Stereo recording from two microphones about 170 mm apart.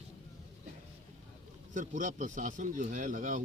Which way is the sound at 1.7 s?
50° right (ahead or behind).